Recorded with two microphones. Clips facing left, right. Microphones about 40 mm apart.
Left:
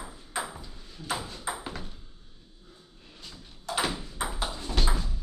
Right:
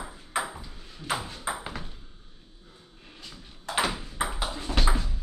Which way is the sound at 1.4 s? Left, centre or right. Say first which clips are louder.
Right 2 dB; centre.